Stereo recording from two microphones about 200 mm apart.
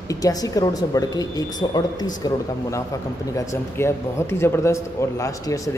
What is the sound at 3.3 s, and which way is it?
A man's voice, 15° left (ahead or behind).